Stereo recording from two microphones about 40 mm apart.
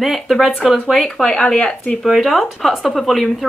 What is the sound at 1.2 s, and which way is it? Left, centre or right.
Speech, centre.